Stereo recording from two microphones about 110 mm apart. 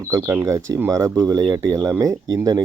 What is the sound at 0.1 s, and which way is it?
Speech, 25° right (ahead or behind).